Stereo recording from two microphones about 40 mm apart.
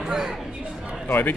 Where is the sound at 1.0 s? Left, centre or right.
Left.